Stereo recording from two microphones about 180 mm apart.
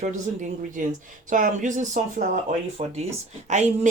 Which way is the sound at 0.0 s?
40° right (ahead or behind).